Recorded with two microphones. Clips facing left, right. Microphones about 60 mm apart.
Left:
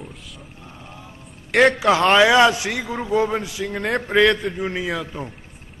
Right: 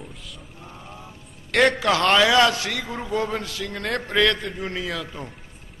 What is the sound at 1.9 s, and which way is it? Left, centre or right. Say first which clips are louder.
A man's voice: left 3 dB; centre.